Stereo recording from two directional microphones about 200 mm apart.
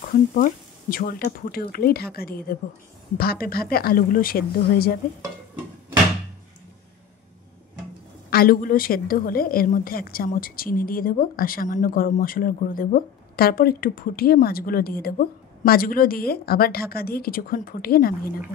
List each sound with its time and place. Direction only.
0.1 s a woman's voice: 45° left (ahead or behind)
8.3 s a woman's voice: 50° left (ahead or behind)